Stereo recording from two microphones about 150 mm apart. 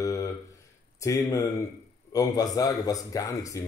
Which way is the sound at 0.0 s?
20° left (ahead or behind).